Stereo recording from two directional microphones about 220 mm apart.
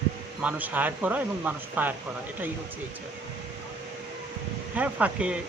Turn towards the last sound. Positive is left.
turn(degrees=-5)  # may be behind; listen again after turning